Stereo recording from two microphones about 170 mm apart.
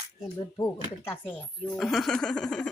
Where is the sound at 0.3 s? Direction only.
20° left (ahead or behind).